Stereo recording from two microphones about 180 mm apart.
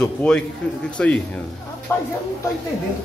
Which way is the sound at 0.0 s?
5° left (ahead or behind).